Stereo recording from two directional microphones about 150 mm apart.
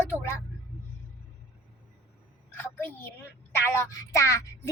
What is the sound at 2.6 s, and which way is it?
A woman's voice, 15° left (ahead or behind).